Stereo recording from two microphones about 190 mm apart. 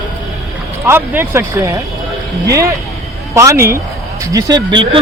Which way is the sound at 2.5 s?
15° right (ahead or behind).